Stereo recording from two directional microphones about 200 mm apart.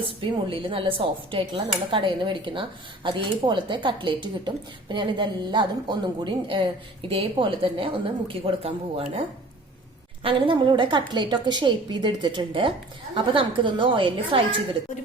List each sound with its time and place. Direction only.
0.0 s a woman's voice: 25° right (ahead or behind)
10.2 s a woman's voice: 25° right (ahead or behind)